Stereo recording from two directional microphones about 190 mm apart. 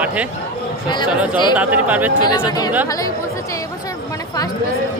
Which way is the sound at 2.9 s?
20° left (ahead or behind).